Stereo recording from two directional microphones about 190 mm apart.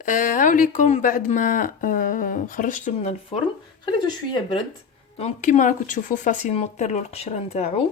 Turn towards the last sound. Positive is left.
turn(degrees=35)  # may be behind; listen again after turning